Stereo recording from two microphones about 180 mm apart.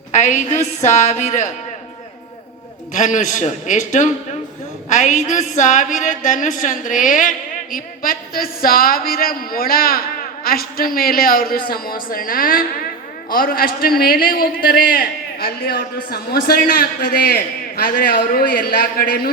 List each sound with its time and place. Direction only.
0.1 s a woman's voice: 45° left (ahead or behind)
2.9 s a woman's voice: 45° left (ahead or behind)